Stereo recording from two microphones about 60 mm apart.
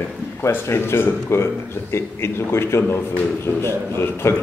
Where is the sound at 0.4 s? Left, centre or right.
Left.